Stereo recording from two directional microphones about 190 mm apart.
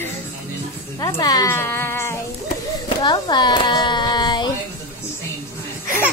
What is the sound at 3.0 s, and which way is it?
Hands, 25° left (ahead or behind).